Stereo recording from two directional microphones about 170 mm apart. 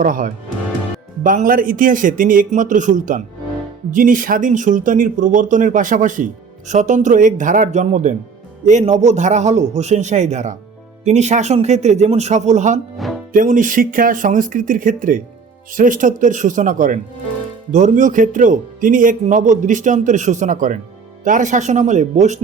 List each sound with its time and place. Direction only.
0.0 s speech: 55° right (ahead or behind)